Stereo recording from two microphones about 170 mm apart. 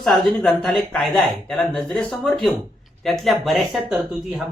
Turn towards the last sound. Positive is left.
turn(degrees=-5)  # may be behind; listen again after turning